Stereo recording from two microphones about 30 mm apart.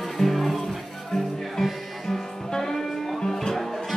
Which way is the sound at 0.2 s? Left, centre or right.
Centre.